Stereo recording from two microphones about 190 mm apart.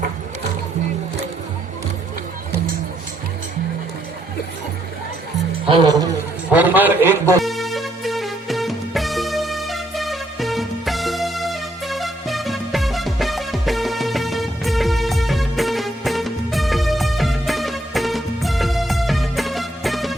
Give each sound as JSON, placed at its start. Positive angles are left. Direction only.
{"t": 5.6, "sound": "speech", "side_deg": -25}
{"t": 6.5, "sound": "music", "side_deg": -10}
{"t": 7.4, "sound": "music", "side_deg": 0}